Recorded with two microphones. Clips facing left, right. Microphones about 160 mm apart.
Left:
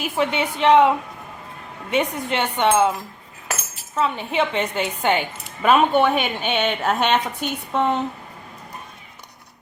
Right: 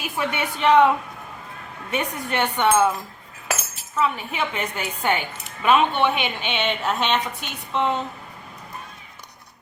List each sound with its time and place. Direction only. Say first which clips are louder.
0.2 s a woman's voice: left 3 dB; 20° left (ahead or behind)
1.9 s a woman's voice: left 4 dB; 20° left (ahead or behind)
3.9 s a woman's voice: left 3 dB; 30° left (ahead or behind)
5.6 s a woman's voice: left 3 dB; 40° left (ahead or behind)